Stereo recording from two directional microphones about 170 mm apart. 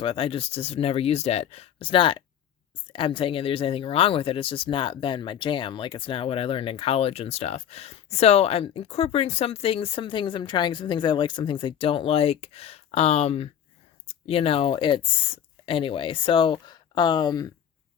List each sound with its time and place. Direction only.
0.0 s speech: 30° left (ahead or behind)